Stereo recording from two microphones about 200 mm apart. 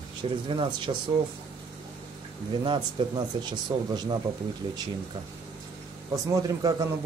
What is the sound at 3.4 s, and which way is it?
Speech, 20° right (ahead or behind).